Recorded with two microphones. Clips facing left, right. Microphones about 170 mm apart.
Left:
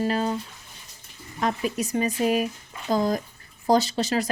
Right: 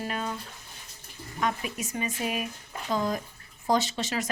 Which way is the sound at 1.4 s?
35° left (ahead or behind).